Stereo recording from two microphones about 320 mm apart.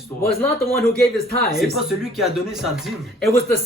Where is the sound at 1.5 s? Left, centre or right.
Centre.